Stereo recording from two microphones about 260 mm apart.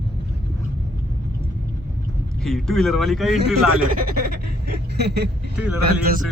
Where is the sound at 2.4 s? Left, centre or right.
Centre.